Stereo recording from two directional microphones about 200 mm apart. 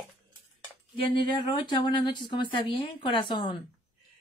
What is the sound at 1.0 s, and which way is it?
Speech, 25° left (ahead or behind).